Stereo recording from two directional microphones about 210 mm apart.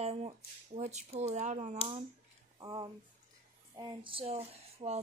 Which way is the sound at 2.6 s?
20° right (ahead or behind).